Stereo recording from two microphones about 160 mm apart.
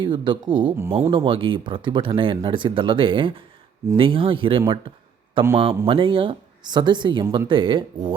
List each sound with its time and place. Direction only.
0.0 s speech: 30° right (ahead or behind)